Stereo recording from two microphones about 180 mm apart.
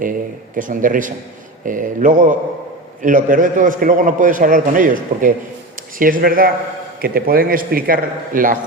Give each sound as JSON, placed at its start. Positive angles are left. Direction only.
{"t": 0.0, "sound": "a man's voice", "side_deg": -50}